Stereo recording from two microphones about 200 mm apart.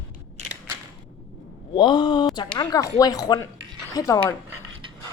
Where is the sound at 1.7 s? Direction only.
20° left (ahead or behind).